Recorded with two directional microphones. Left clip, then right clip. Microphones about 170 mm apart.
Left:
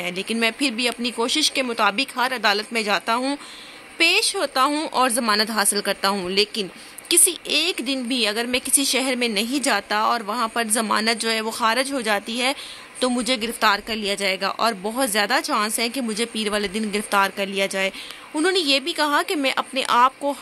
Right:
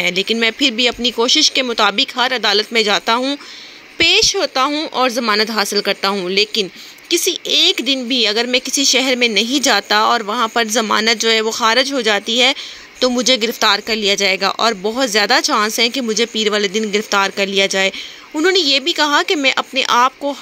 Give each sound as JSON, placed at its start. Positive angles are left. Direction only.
{"t": 0.0, "sound": "speech", "side_deg": -25}